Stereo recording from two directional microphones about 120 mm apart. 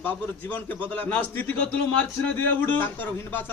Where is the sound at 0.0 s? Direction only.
15° left (ahead or behind).